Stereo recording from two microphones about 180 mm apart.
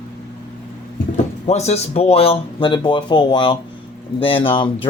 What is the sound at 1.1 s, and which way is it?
Speech, 35° left (ahead or behind).